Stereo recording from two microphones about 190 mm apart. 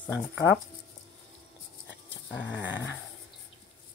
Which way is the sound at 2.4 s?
70° left (ahead or behind).